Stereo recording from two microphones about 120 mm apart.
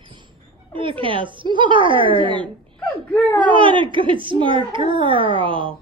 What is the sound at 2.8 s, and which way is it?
Wail, 15° left (ahead or behind).